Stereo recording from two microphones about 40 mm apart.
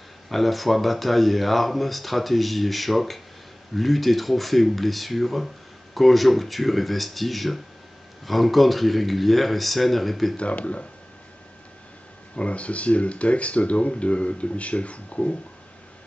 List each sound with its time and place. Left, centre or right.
0.3 s speech: centre
10.5 s speech: left
12.4 s speech: left